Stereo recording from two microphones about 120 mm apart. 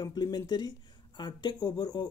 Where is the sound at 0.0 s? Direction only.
35° left (ahead or behind).